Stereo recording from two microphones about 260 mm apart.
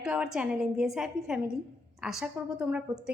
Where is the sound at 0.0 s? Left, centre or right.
Centre.